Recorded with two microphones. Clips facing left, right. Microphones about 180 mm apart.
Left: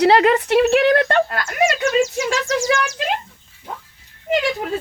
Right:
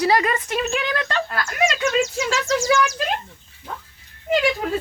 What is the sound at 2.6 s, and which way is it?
Speech, 30° left (ahead or behind).